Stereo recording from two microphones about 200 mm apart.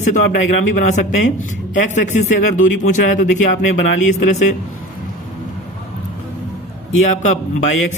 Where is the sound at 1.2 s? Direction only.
40° left (ahead or behind).